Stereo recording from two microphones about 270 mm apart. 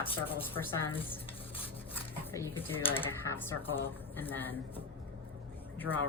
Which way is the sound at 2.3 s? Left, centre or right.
Centre.